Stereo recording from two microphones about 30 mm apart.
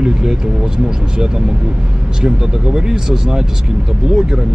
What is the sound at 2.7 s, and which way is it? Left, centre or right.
Speech, right.